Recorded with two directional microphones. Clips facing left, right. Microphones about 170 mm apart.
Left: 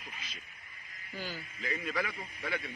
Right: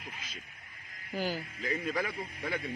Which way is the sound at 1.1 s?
40° right (ahead or behind).